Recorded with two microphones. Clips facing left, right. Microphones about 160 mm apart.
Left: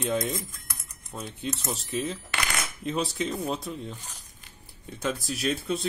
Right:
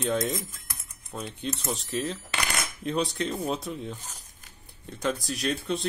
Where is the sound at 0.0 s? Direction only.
Centre (ahead or behind).